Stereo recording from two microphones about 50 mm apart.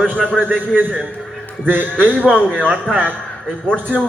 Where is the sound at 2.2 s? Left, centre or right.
Centre.